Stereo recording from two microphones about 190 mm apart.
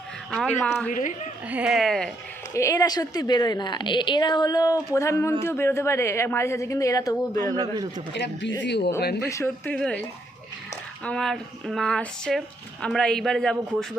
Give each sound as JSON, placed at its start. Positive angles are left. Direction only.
{"t": 0.3, "sound": "speech", "side_deg": 5}
{"t": 0.9, "sound": "a woman's voice", "side_deg": 45}
{"t": 1.5, "sound": "speech", "side_deg": -5}
{"t": 2.5, "sound": "a woman's voice", "side_deg": 15}
{"t": 7.5, "sound": "a man's voice", "side_deg": -20}
{"t": 8.1, "sound": "speech", "side_deg": 70}
{"t": 9.2, "sound": "a woman's voice", "side_deg": 15}